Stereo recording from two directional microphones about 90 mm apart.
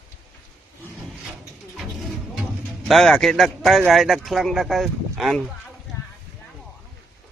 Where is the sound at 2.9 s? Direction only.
Centre (ahead or behind).